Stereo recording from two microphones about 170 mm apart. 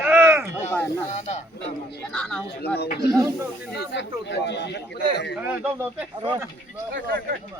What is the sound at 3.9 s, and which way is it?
Speech, 90° left.